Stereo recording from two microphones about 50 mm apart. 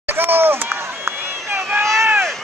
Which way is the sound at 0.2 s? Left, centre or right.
Right.